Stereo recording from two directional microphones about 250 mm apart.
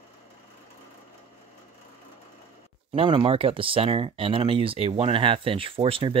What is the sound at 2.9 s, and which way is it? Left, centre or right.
Speech, right.